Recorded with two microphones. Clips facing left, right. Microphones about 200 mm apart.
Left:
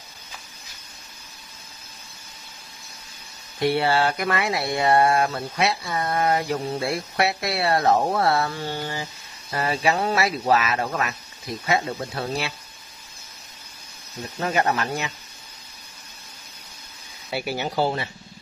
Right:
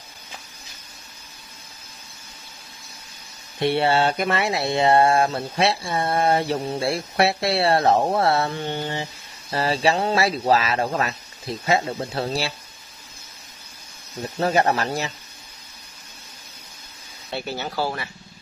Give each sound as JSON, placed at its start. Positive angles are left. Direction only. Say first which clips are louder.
{"t": 3.5, "sound": "speech", "louder": "right 1 dB", "side_deg": -25}
{"t": 14.2, "sound": "speech", "louder": "right 3 dB", "side_deg": -35}
{"t": 17.3, "sound": "speech", "louder": "left 2 dB", "side_deg": 10}